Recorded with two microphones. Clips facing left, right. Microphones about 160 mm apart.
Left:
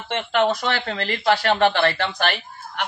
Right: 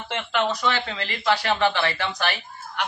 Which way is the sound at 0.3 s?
50° left (ahead or behind).